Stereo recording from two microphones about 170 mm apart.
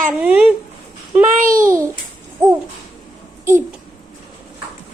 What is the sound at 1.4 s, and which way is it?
Speech, 55° right (ahead or behind).